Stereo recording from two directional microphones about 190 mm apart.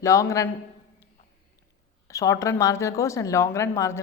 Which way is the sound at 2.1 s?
15° left (ahead or behind).